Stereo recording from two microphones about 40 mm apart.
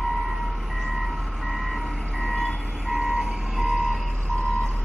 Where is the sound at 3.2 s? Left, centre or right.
Centre.